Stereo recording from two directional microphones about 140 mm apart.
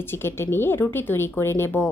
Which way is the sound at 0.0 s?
15° left (ahead or behind).